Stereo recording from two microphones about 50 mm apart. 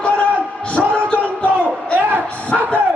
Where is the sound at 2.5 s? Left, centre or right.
Centre.